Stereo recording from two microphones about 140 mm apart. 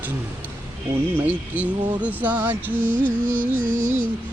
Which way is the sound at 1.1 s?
10° right (ahead or behind).